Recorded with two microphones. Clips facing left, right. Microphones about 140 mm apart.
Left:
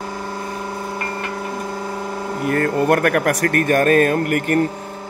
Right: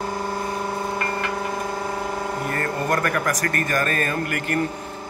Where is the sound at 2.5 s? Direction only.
60° left (ahead or behind).